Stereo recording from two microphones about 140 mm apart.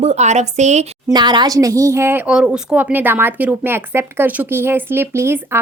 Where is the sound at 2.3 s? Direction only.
5° right (ahead or behind).